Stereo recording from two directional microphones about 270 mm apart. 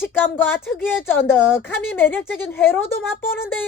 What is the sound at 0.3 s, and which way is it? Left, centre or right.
A woman's voice, centre.